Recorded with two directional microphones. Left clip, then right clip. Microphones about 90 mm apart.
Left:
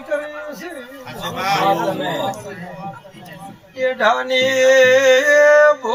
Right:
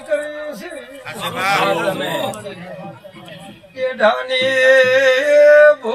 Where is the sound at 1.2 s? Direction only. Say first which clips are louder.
Right 2 dB; 20° left (ahead or behind).